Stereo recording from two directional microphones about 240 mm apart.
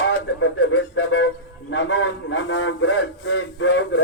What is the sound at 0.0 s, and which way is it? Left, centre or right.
A man's voice, left.